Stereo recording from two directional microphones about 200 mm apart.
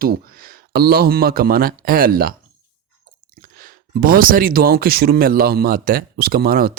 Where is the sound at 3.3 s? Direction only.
45° right (ahead or behind).